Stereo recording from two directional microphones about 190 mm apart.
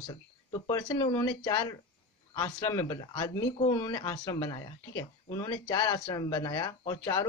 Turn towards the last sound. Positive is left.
turn(degrees=20)  # may be behind; listen again after turning